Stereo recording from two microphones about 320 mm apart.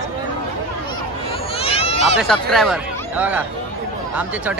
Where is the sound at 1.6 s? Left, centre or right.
Centre.